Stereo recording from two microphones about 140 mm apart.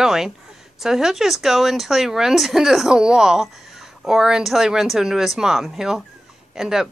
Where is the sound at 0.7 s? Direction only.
5° right (ahead or behind).